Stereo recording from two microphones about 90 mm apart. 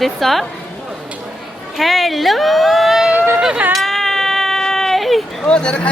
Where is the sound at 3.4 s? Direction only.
10° right (ahead or behind).